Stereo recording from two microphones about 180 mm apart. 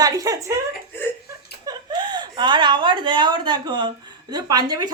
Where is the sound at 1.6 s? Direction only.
25° right (ahead or behind).